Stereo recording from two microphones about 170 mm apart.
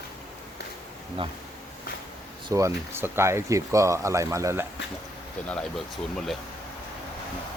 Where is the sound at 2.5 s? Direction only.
20° right (ahead or behind).